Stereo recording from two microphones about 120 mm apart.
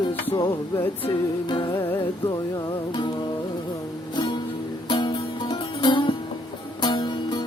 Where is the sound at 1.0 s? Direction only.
40° left (ahead or behind).